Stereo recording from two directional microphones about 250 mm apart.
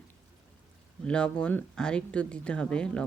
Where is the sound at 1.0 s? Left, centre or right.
Centre.